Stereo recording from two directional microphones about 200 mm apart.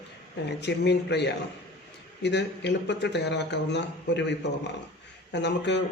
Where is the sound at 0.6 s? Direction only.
60° left (ahead or behind).